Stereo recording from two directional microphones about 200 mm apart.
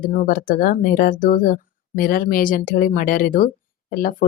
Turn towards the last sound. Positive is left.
turn(degrees=45)  # may be behind; listen again after turning